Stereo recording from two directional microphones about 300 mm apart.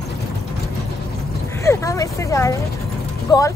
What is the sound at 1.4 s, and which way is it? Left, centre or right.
A woman's voice, centre.